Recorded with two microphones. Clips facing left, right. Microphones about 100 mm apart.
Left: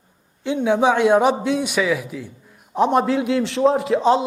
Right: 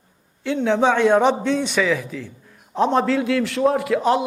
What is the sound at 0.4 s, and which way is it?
A man's voice, 15° left (ahead or behind).